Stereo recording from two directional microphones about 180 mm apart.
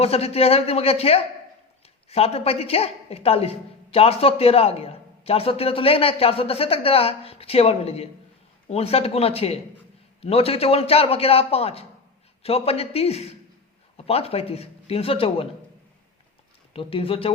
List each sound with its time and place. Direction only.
0.0 s a woman's voice: 35° left (ahead or behind)
16.7 s a woman's voice: 30° left (ahead or behind)